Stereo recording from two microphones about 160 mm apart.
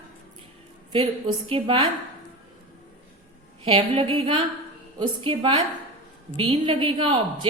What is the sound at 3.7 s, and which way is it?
A woman's voice, 35° right (ahead or behind).